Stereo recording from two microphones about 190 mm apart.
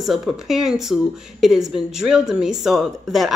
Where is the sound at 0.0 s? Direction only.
Centre (ahead or behind).